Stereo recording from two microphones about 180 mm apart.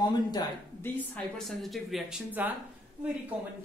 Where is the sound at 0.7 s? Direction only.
10° left (ahead or behind); by 2.5 s 5° right (ahead or behind).